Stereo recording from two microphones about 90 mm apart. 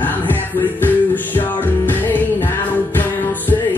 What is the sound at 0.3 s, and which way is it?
Music, 20° left (ahead or behind).